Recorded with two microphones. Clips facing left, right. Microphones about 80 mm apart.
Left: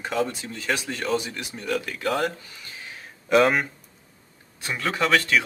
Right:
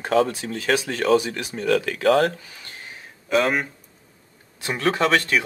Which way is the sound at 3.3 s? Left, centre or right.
Centre.